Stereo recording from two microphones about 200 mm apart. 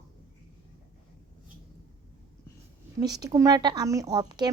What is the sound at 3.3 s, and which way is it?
A woman's voice, 15° right (ahead or behind).